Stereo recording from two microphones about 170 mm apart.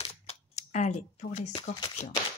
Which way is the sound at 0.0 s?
35° left (ahead or behind).